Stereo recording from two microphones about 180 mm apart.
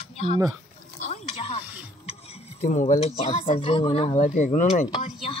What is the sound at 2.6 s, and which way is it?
Speech, 45° left (ahead or behind).